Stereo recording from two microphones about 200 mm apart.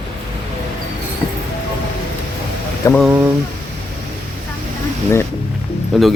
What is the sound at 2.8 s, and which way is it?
Speech, 15° left (ahead or behind).